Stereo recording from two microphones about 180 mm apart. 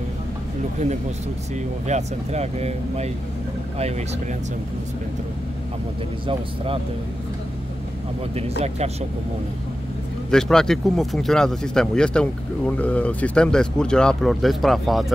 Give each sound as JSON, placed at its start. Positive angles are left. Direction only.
{"t": 1.9, "sound": "speech", "side_deg": -40}
{"t": 6.2, "sound": "speech", "side_deg": -30}
{"t": 8.4, "sound": "speech", "side_deg": -35}
{"t": 10.3, "sound": "speech", "side_deg": 5}